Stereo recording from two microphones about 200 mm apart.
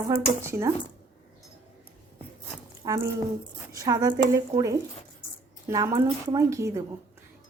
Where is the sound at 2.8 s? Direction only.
15° right (ahead or behind).